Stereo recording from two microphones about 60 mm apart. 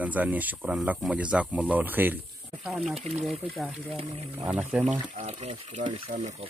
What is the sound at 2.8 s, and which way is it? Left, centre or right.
Speech, centre.